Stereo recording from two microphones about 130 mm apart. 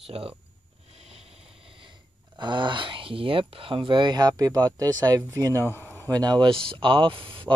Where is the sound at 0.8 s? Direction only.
50° right (ahead or behind).